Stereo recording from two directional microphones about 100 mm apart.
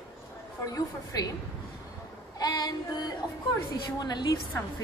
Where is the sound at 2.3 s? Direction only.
40° left (ahead or behind).